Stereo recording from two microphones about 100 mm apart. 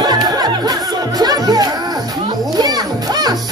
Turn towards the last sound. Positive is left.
turn(degrees=-40)  # may be behind; listen again after turning